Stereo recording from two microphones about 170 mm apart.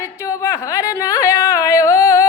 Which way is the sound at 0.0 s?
20° left (ahead or behind).